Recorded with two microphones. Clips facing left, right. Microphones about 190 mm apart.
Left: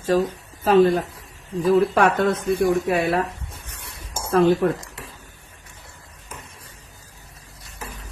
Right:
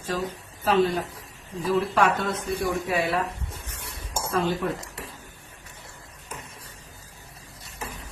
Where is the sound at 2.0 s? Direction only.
55° left (ahead or behind).